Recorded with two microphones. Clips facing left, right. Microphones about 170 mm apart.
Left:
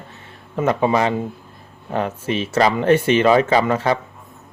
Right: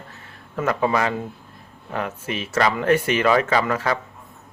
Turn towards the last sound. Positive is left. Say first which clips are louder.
# left 4 dB
turn(degrees=25)  # may be behind; listen again after turning